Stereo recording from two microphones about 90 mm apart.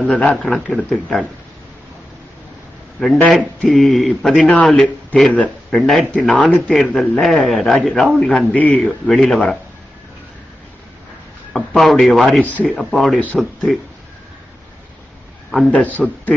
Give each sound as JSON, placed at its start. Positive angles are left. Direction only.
{"t": 0.1, "sound": "a man's voice", "side_deg": 15}
{"t": 3.3, "sound": "a man's voice", "side_deg": 5}
{"t": 6.1, "sound": "a man's voice", "side_deg": 10}
{"t": 11.5, "sound": "a man's voice", "side_deg": 0}
{"t": 12.9, "sound": "a man's voice", "side_deg": 0}
{"t": 15.7, "sound": "speech", "side_deg": 15}